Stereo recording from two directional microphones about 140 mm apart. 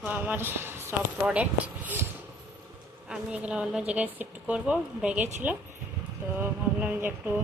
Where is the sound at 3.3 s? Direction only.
10° right (ahead or behind).